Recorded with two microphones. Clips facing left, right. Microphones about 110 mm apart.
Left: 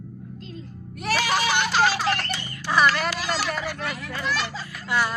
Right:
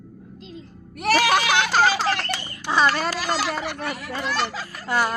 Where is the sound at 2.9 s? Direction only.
35° right (ahead or behind).